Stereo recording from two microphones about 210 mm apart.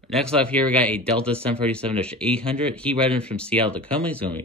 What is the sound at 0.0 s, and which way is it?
Speech, 5° left (ahead or behind).